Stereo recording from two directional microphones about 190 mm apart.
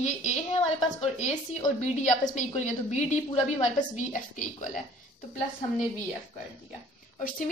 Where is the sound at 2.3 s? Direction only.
40° left (ahead or behind).